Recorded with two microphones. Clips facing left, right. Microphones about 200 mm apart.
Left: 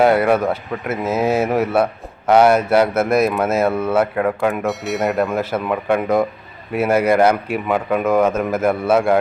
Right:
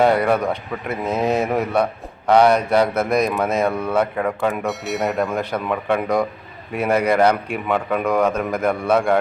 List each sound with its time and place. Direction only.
0.0 s speech: 5° left (ahead or behind)